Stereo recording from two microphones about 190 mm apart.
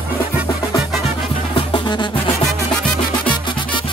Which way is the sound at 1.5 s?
25° left (ahead or behind).